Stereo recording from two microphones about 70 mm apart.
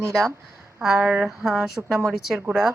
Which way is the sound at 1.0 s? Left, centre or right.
Centre.